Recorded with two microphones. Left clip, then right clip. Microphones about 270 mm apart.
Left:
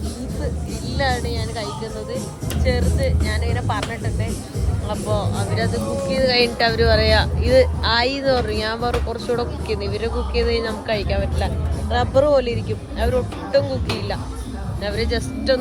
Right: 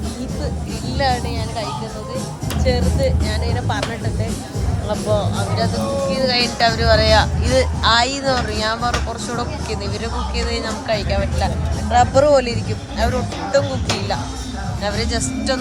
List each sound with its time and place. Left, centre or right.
0.9 s speech: centre
2.7 s speech: centre
5.1 s speech: right
5.5 s speech: centre
14.8 s speech: centre